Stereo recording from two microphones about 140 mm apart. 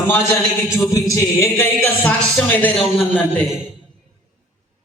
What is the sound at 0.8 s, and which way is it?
A man's voice, 25° left (ahead or behind).